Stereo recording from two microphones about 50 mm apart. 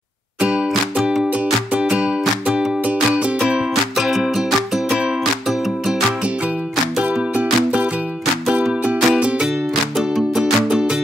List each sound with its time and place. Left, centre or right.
0.4 s music: right
0.9 s music: centre
1.7 s music: right
3.4 s music: centre
4.8 s music: right
5.5 s music: centre
7.0 s music: right